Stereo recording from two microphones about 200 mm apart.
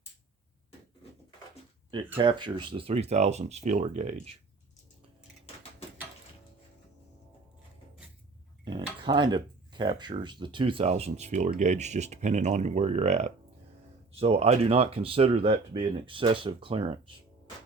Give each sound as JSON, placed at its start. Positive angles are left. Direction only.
{"t": 1.9, "sound": "speech", "side_deg": -25}
{"t": 8.6, "sound": "cutlery", "side_deg": -20}
{"t": 11.6, "sound": "speech", "side_deg": -35}